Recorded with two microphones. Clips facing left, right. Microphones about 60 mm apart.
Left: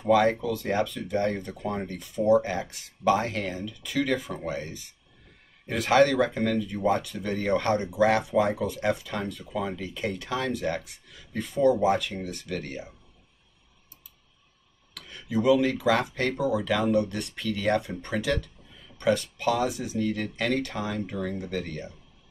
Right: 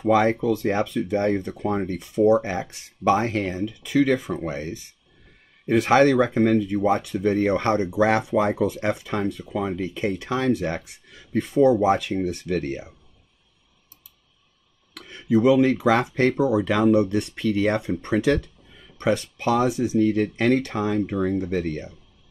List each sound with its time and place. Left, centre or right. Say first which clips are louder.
0.0 s speech: right 3 dB; right
5.7 s speech: right 4 dB; right
12.2 s speech: right 9 dB; right
15.0 s speech: right 8 dB; right
21.1 s speech: right 8 dB; right